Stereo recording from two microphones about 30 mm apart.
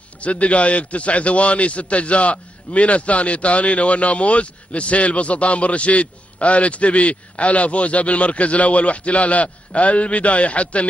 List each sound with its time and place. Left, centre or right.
0.2 s a man's voice: left